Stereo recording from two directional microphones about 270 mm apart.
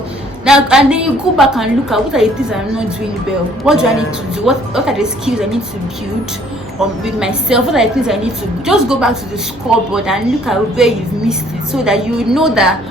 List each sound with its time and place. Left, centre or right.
0.4 s a woman's voice: centre
6.7 s a woman's voice: centre